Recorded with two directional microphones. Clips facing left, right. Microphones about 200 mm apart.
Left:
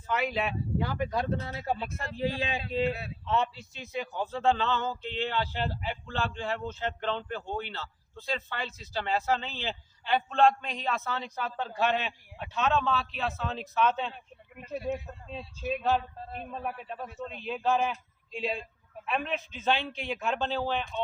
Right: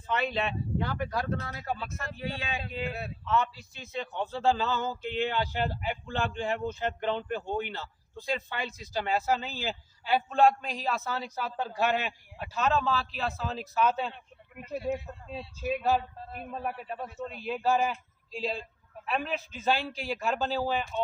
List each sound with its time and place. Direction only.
0.1 s speech: 5° left (ahead or behind); by 3.8 s 25° left (ahead or behind)
4.1 s a man's voice: centre (ahead or behind)
15.3 s a man's voice: 5° right (ahead or behind)